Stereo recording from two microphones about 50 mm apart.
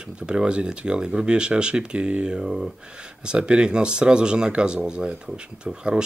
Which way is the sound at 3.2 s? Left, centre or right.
Centre.